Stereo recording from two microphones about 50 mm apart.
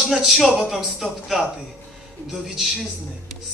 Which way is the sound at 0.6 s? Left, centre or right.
Centre.